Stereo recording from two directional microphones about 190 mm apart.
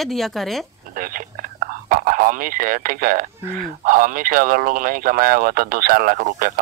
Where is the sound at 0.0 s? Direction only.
Centre (ahead or behind).